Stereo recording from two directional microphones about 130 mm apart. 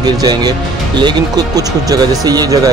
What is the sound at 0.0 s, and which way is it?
Speech, 30° right (ahead or behind).